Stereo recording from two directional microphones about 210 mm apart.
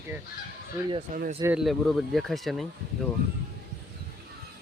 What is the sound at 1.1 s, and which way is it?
Speech, 35° right (ahead or behind).